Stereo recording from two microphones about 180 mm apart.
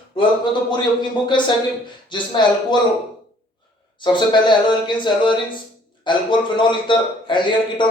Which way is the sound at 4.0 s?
25° left (ahead or behind).